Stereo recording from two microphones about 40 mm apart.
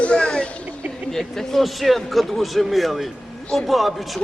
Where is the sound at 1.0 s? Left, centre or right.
Centre.